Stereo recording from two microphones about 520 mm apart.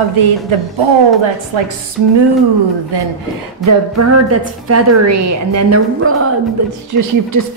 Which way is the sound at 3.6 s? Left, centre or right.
Right.